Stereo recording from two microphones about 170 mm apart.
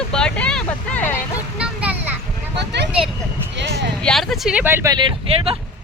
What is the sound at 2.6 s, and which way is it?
Speech, 90° right.